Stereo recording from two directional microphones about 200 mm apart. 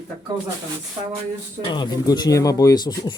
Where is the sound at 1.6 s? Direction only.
20° left (ahead or behind).